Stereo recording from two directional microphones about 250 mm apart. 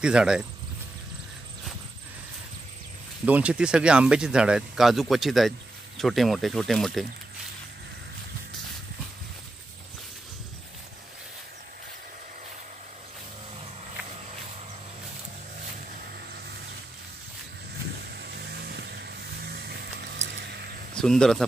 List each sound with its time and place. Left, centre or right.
0.0 s speech: centre
3.3 s speech: centre
18.0 s vehicle: right
20.9 s speech: centre